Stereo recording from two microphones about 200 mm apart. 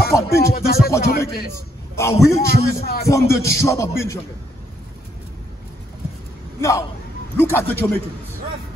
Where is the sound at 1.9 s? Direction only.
15° left (ahead or behind).